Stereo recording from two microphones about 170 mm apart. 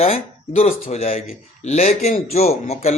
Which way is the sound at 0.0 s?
35° left (ahead or behind).